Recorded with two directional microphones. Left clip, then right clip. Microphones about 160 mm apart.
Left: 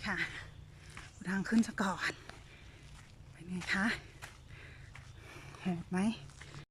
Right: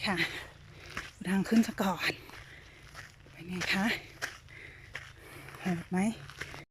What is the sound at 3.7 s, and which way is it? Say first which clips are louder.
Speech: right 2 dB; 10° right (ahead or behind).